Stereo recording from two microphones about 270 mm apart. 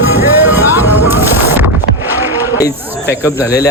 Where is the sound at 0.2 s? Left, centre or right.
Centre.